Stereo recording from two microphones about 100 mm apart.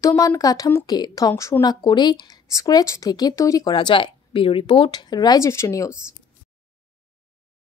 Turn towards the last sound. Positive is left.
turn(degrees=30)  # may be behind; listen again after turning